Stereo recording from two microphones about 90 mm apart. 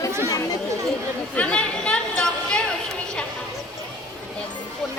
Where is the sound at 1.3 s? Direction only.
15° left (ahead or behind).